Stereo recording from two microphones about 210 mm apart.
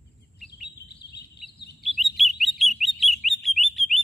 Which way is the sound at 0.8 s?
50° left (ahead or behind).